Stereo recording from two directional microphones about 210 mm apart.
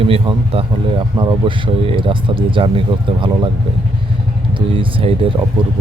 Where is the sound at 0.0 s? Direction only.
25° right (ahead or behind).